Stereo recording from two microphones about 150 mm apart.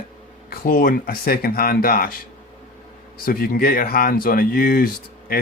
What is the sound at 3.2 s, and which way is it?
Speech, 75° left (ahead or behind).